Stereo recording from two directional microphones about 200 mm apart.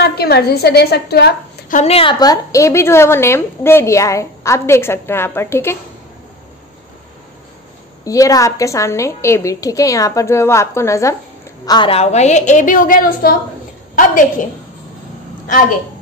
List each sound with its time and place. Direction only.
0.0 s a woman's voice: 55° left (ahead or behind)
1.8 s a woman's voice: 30° left (ahead or behind); by 5.8 s 10° left (ahead or behind)
8.0 s a woman's voice: 15° left (ahead or behind); by 13.4 s 45° left (ahead or behind)